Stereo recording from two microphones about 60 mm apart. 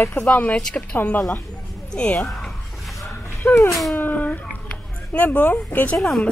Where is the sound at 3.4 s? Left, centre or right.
Left.